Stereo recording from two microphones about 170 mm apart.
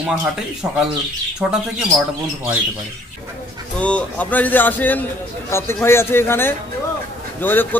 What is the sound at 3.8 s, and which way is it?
A man's voice, 5° left (ahead or behind).